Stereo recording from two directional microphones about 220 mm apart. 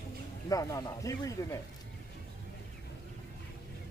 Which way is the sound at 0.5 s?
15° left (ahead or behind).